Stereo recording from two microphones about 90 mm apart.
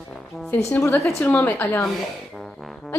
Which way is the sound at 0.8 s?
35° left (ahead or behind).